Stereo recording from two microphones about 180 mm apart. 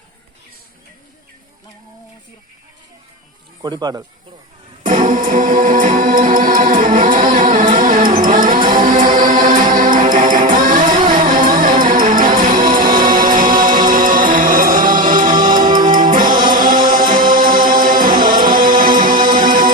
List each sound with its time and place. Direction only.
3.6 s speech: 20° right (ahead or behind)
4.8 s music: 45° right (ahead or behind)
8.2 s a sound: 50° right (ahead or behind)
8.7 s music: 50° right (ahead or behind)